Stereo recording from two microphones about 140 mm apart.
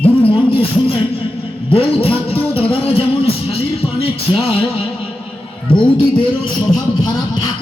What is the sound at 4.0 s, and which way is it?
Music, 40° left (ahead or behind).